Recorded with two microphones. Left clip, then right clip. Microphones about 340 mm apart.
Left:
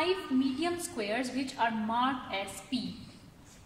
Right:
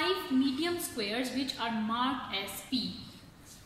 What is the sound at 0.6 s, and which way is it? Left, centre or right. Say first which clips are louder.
A woman's voice: even; left.